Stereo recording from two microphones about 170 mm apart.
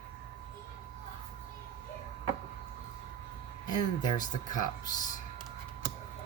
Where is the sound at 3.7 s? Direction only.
25° left (ahead or behind).